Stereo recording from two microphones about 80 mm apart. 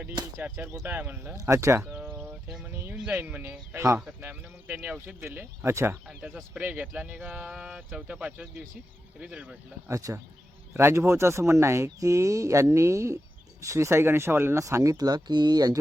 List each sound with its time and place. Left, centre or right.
0.2 s speech: right
0.5 s speech: right
1.4 s speech: right
1.8 s a sound: centre
2.6 s music: right
3.2 s speech: right
6.1 s speech: centre
9.9 s speech: right
10.8 s speech: right
14.9 s speech: right